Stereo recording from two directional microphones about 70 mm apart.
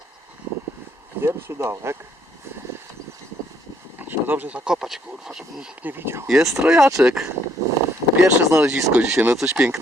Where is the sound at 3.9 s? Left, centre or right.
Right; by 5.6 s centre.